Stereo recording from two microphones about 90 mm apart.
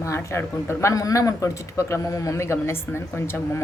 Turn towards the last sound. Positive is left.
turn(degrees=25)  # may be behind; listen again after turning